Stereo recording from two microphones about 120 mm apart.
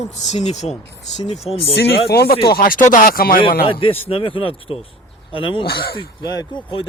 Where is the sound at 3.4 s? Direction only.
45° left (ahead or behind).